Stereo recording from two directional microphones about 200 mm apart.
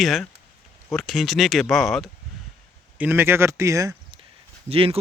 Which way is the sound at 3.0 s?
10° right (ahead or behind).